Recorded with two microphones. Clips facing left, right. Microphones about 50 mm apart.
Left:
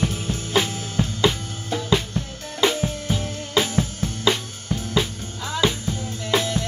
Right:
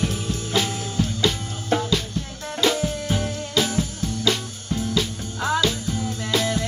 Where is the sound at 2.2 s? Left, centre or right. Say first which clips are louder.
Left 2 dB; left.